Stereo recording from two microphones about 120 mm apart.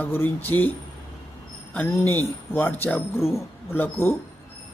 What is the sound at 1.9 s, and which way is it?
Speech, 20° left (ahead or behind).